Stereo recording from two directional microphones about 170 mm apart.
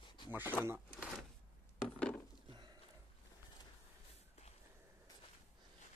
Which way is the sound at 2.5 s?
25° right (ahead or behind).